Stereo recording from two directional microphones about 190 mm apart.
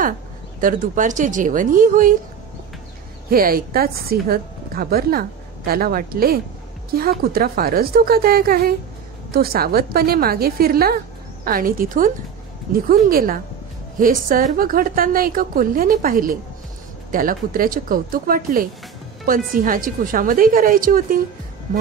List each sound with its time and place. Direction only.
0.6 s a woman's voice: 45° right (ahead or behind)
3.3 s a woman's voice: 50° right (ahead or behind)